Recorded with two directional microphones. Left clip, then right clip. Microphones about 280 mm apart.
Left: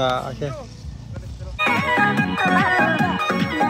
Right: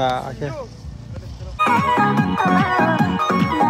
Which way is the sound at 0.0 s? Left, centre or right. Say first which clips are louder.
Right 1 dB; centre.